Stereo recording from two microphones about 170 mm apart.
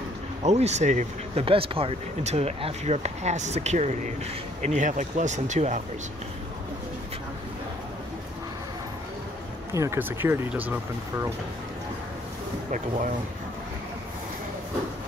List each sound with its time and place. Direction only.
0.4 s speech: 40° right (ahead or behind)
1.4 s speech: 30° right (ahead or behind)
9.8 s speech: 15° right (ahead or behind)
12.7 s speech: 45° right (ahead or behind)